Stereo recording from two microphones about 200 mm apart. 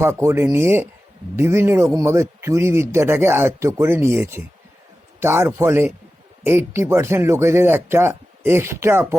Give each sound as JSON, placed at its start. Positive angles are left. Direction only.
{"t": 0.0, "sound": "a man's voice", "side_deg": -15}